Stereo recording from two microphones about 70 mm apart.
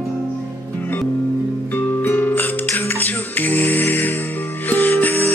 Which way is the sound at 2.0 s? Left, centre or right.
Left.